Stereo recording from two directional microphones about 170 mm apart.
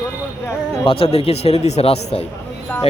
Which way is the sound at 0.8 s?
35° left (ahead or behind).